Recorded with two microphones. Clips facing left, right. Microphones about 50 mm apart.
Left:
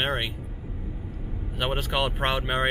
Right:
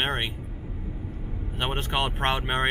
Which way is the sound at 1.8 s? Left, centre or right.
Right.